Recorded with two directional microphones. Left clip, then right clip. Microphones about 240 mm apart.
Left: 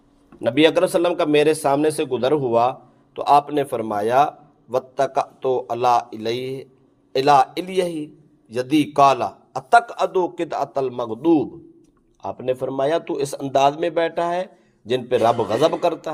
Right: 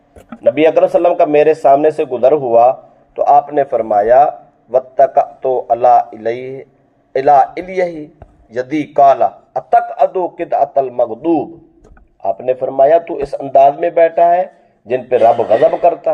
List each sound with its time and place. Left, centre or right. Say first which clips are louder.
0.4 s speech: right 6 dB; left